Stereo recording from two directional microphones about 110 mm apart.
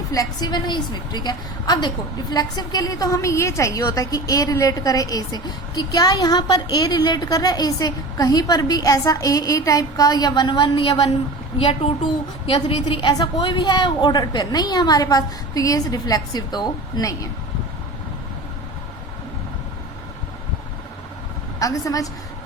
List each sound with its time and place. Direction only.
0.1 s a woman's voice: 35° left (ahead or behind)
11.5 s a woman's voice: 60° left (ahead or behind); by 17.2 s 30° left (ahead or behind)
21.6 s a woman's voice: 30° left (ahead or behind)